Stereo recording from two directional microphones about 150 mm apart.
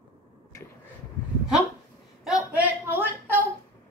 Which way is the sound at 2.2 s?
5° right (ahead or behind).